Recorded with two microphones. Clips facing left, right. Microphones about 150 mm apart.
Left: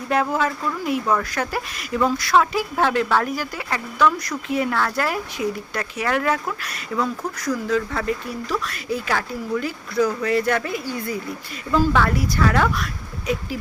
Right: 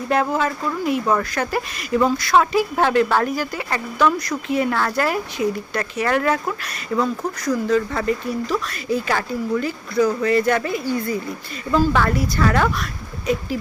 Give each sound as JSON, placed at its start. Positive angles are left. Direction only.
{"t": 0.1, "sound": "speech", "side_deg": 0}
{"t": 6.9, "sound": "speech", "side_deg": -10}
{"t": 7.4, "sound": "speech", "side_deg": 5}